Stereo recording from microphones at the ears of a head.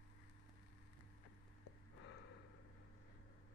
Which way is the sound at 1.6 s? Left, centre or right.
Left.